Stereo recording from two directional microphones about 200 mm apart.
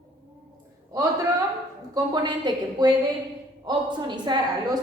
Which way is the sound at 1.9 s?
20° right (ahead or behind).